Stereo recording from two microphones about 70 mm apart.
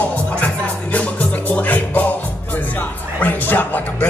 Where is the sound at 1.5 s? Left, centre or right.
Left.